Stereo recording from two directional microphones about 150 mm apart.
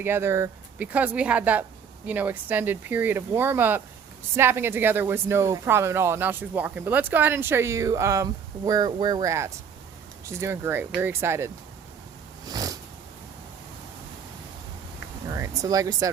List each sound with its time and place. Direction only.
0.0 s speech: 15° right (ahead or behind)
12.5 s cat: 25° right (ahead or behind)
15.3 s speech: 25° right (ahead or behind)